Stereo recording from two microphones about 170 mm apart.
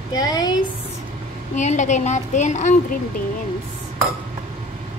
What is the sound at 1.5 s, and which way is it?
A woman's voice, 45° left (ahead or behind).